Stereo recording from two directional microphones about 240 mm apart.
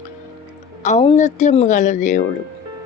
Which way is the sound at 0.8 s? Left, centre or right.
Left.